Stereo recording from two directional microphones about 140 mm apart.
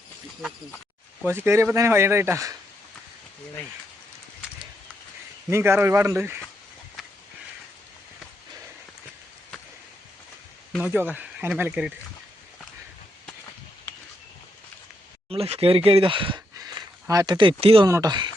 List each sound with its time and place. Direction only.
1.2 s speech: 15° right (ahead or behind)
5.5 s speech: 20° right (ahead or behind)
10.8 s speech: 10° right (ahead or behind)
15.3 s speech: 45° right (ahead or behind)
16.6 s a sound: 25° right (ahead or behind)
17.8 s speech: 25° right (ahead or behind)